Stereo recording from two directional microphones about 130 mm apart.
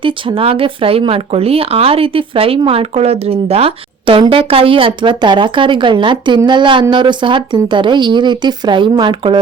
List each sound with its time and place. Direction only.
0.0 s speech: 40° right (ahead or behind)